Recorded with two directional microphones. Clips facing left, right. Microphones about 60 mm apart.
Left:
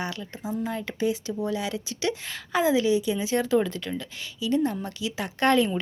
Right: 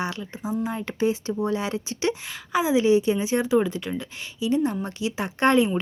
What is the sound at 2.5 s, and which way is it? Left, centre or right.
Speech, centre.